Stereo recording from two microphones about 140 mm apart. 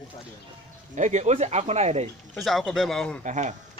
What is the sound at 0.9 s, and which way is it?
Speech, 60° right (ahead or behind).